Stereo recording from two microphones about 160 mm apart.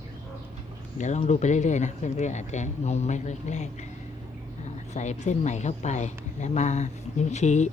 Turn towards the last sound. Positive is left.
turn(degrees=45)  # may be behind; listen again after turning